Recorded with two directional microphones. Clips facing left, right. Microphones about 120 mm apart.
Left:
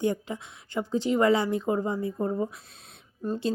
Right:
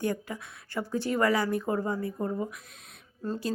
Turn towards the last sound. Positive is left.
turn(degrees=20)  # may be behind; listen again after turning